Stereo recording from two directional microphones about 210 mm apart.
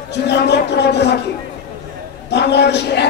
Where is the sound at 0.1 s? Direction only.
55° left (ahead or behind).